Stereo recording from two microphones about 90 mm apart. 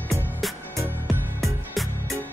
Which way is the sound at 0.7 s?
25° right (ahead or behind).